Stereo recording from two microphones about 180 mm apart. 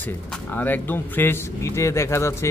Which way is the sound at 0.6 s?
10° left (ahead or behind).